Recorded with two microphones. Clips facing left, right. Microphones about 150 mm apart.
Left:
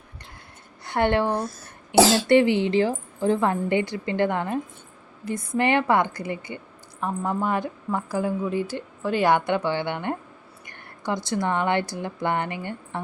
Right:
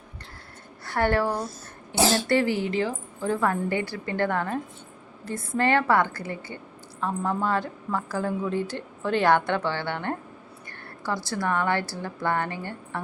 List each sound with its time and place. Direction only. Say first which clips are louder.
0.9 s a woman's voice: left 2 dB; 20° left (ahead or behind)
2.0 s speech: left 5 dB; 90° left
2.2 s a woman's voice: left 5 dB; 20° left (ahead or behind)